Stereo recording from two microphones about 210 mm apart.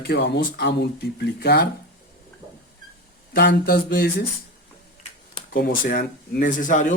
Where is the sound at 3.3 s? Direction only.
50° left (ahead or behind).